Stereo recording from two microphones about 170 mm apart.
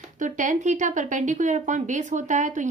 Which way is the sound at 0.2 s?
50° right (ahead or behind).